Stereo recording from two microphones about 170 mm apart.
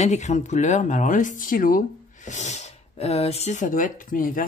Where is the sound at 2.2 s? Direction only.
40° left (ahead or behind).